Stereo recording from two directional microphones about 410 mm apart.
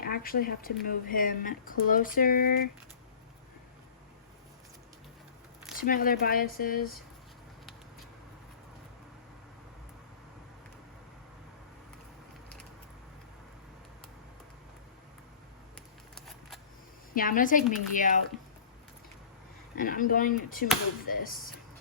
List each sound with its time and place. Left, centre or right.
0.0 s speech: left
5.7 s speech: centre
17.2 s speech: centre
19.7 s speech: left